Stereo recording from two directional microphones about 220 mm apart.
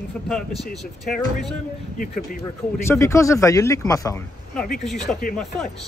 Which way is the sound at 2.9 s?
15° left (ahead or behind).